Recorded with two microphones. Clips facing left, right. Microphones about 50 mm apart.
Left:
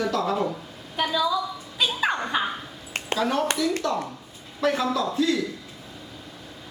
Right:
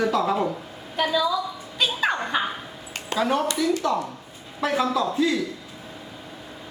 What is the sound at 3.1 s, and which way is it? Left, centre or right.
Speech, centre.